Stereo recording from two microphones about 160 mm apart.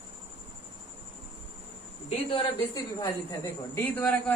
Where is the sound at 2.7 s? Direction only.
20° left (ahead or behind).